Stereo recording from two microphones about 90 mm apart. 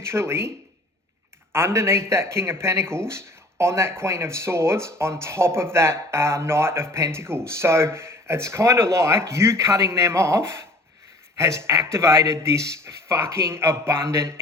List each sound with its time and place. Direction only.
0.1 s speech: 30° right (ahead or behind)
1.5 s speech: 30° right (ahead or behind)